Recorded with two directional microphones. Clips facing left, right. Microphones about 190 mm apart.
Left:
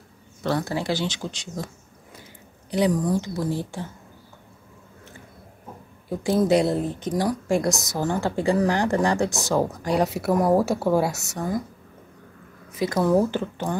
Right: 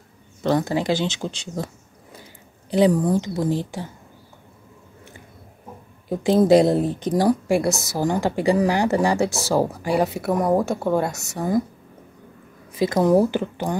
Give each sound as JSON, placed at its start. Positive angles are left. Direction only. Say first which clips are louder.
{"t": 0.4, "sound": "speech", "louder": "right 4 dB", "side_deg": -20}
{"t": 2.8, "sound": "speech", "louder": "right 4 dB", "side_deg": -25}
{"t": 6.0, "sound": "a woman's voice", "louder": "right 4 dB", "side_deg": -20}
{"t": 6.4, "sound": "speech", "louder": "right 6 dB", "side_deg": -35}
{"t": 7.4, "sound": "a woman's voice", "louder": "right 2 dB", "side_deg": -10}
{"t": 12.7, "sound": "speech", "louder": "right 3 dB", "side_deg": -25}